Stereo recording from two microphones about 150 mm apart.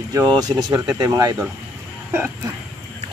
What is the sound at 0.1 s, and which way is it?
Speech, 25° right (ahead or behind).